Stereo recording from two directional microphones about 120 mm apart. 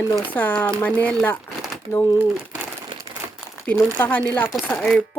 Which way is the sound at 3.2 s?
25° right (ahead or behind).